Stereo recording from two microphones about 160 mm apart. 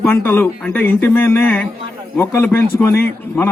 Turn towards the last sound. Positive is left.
turn(degrees=15)  # may be behind; listen again after turning